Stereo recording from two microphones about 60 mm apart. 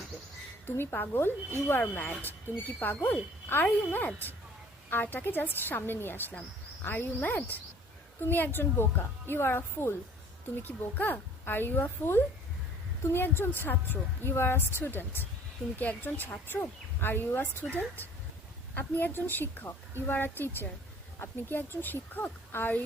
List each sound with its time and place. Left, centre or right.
0.8 s speech: left